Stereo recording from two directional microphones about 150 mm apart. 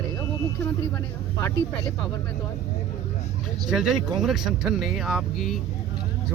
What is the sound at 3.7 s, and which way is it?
Speech, 5° right (ahead or behind).